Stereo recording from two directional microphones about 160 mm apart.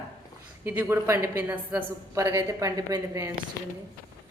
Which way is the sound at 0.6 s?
10° right (ahead or behind).